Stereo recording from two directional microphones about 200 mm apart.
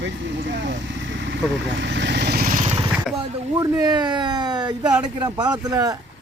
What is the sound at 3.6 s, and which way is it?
A man's voice, 20° right (ahead or behind).